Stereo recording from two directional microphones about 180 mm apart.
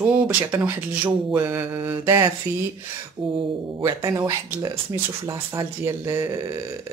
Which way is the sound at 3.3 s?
20° right (ahead or behind).